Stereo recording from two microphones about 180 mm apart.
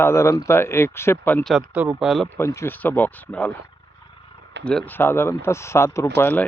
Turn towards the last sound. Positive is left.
turn(degrees=10)  # may be behind; listen again after turning